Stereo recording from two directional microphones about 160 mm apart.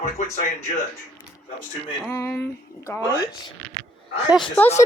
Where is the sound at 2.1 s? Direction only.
15° left (ahead or behind).